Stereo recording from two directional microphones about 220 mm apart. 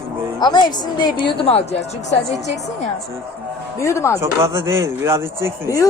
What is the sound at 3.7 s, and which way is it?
Speech, 15° left (ahead or behind).